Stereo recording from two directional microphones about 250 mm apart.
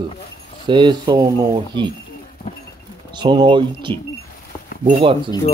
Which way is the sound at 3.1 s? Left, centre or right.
Centre.